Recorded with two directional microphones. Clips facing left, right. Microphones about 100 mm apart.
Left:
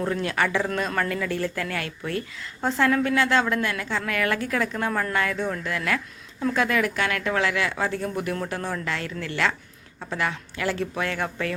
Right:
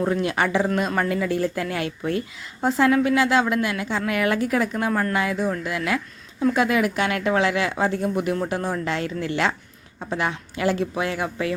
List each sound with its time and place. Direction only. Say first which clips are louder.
0.0 s speech: right 3 dB; 15° right (ahead or behind)